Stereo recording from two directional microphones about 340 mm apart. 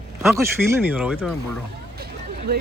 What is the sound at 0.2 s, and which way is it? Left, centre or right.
Speech, centre.